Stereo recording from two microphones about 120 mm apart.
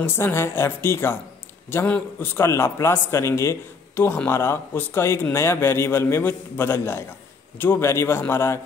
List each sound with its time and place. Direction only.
0.0 s a man's voice: 20° left (ahead or behind)